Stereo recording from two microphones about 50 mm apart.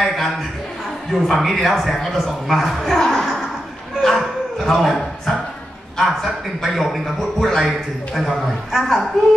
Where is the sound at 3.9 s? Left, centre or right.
Centre.